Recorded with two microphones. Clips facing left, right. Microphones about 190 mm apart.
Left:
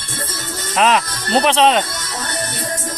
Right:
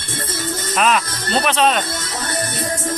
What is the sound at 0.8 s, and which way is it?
Speech, 25° left (ahead or behind).